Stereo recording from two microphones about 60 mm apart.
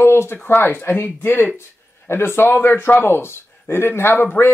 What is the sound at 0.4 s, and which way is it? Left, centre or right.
Speech, left.